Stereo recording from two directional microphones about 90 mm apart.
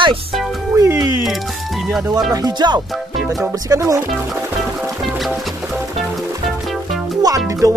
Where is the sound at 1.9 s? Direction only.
5° right (ahead or behind).